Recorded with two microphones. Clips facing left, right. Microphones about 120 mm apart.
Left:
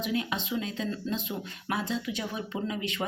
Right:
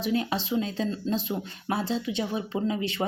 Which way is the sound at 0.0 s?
35° right (ahead or behind).